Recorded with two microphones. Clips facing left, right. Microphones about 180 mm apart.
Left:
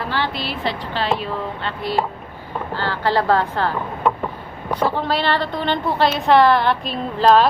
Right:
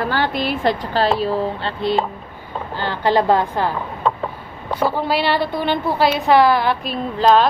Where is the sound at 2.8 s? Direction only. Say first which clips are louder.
Right 3 dB; 15° right (ahead or behind).